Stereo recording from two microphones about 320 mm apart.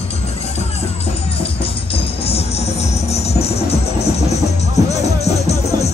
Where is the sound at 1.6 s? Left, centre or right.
Centre.